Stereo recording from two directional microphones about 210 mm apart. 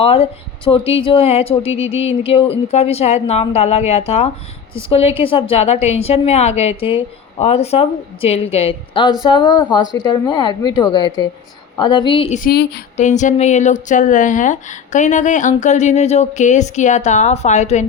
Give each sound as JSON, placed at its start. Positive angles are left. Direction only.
{"t": 0.0, "sound": "a woman's voice", "side_deg": 25}
{"t": 12.4, "sound": "a sound", "side_deg": 50}
{"t": 13.0, "sound": "speech", "side_deg": 35}